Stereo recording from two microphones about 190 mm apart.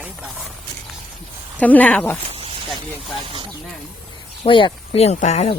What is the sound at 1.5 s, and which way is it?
Speech, 10° left (ahead or behind).